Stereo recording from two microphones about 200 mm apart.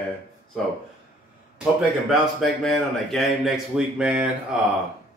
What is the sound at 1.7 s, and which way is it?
Speech, centre (ahead or behind).